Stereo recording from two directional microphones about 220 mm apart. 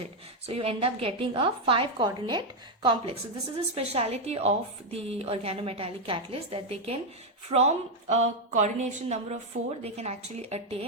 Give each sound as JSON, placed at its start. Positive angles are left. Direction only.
{"t": 0.0, "sound": "a woman's voice", "side_deg": -25}